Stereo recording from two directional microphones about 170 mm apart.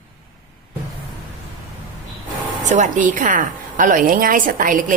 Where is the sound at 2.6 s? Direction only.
45° right (ahead or behind).